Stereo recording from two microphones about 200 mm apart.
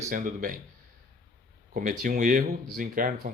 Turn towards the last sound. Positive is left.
turn(degrees=-40)  # may be behind; listen again after turning